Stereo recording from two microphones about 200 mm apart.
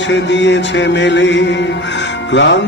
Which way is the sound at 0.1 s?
60° left (ahead or behind).